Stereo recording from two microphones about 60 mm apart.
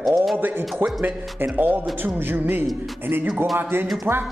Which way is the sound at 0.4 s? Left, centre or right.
Right.